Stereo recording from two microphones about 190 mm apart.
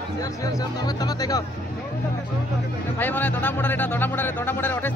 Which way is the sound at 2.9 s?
10° left (ahead or behind).